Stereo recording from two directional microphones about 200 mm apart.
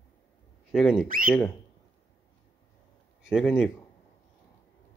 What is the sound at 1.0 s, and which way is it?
Speech, 45° right (ahead or behind).